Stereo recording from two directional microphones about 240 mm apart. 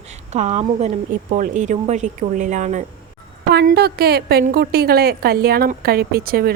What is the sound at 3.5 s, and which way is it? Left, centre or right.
A woman's voice, right.